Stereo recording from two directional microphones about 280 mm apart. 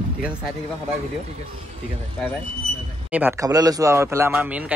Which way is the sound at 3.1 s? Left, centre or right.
Centre.